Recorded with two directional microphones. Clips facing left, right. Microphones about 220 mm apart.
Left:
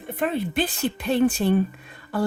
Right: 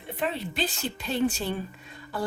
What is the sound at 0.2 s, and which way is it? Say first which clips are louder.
Speech: left 6 dB; 50° left (ahead or behind).